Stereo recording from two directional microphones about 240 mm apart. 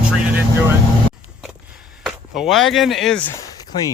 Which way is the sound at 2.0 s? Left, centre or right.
Centre.